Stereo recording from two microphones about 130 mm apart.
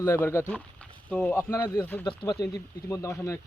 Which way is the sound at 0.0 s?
20° left (ahead or behind).